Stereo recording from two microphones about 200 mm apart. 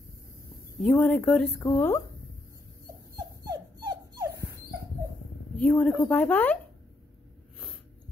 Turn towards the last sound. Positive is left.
turn(degrees=0)  # may be behind; listen again after turning